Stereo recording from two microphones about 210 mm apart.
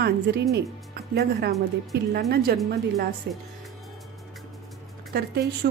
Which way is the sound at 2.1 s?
50° right (ahead or behind).